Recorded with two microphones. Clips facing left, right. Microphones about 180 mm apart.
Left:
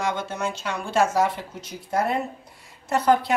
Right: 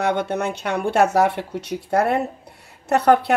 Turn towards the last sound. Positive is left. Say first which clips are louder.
# right 4 dB
turn(degrees=-65)  # may be behind; listen again after turning